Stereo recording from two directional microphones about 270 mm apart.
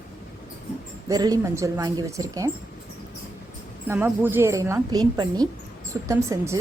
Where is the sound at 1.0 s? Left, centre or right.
Centre.